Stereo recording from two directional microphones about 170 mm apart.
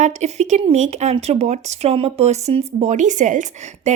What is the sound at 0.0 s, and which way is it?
Speech, 40° right (ahead or behind).